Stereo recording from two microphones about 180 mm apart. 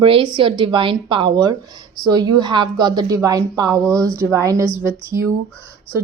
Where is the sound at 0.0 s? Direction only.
30° right (ahead or behind).